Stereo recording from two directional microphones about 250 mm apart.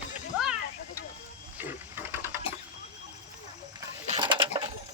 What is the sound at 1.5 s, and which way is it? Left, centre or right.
Ratchet, centre.